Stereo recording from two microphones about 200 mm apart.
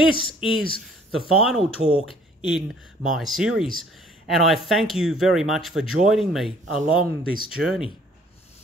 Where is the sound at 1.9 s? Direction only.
25° left (ahead or behind).